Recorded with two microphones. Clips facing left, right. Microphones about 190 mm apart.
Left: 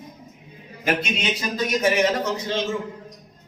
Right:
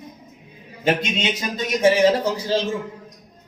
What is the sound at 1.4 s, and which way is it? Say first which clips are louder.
A man's voice: right 4 dB; 25° right (ahead or behind).